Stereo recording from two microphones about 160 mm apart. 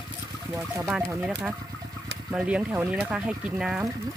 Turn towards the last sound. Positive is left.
turn(degrees=-5)  # may be behind; listen again after turning